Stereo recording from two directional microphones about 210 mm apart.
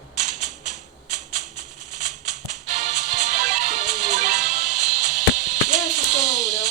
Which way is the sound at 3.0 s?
35° right (ahead or behind).